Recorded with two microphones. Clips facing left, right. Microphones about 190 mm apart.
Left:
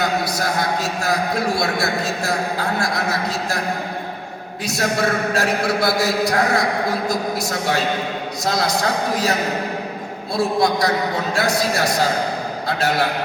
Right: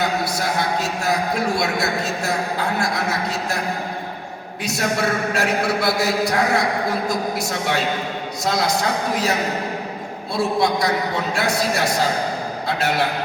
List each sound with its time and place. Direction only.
0.0 s a man's voice: 40° left (ahead or behind)
4.6 s a man's voice: 35° left (ahead or behind)
10.3 s a man's voice: 40° left (ahead or behind)